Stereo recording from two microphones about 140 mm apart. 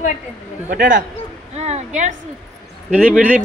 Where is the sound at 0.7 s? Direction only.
70° right (ahead or behind).